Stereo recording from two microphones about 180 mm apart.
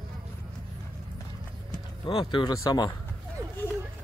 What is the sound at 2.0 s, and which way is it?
Speech, 25° left (ahead or behind).